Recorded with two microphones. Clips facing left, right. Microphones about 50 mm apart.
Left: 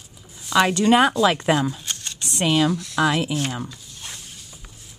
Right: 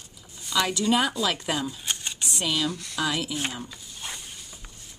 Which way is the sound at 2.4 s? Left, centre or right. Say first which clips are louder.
Left 8 dB; left.